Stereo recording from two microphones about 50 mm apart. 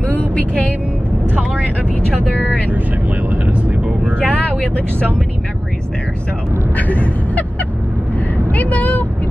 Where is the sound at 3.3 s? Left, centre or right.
Right.